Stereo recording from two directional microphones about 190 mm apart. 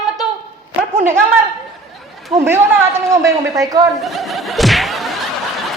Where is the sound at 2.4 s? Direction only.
15° right (ahead or behind).